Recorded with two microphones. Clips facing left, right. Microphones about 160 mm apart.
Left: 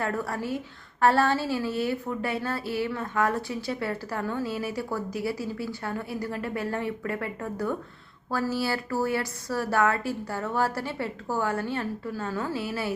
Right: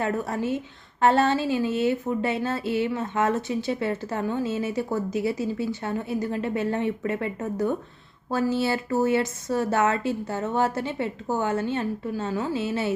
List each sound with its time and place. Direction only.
0.0 s a woman's voice: 20° right (ahead or behind)